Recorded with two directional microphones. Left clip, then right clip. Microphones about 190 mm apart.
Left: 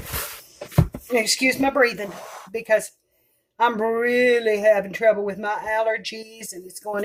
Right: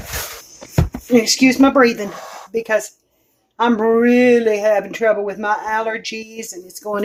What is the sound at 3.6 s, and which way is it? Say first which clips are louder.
Speech: right 6 dB; 10° right (ahead or behind).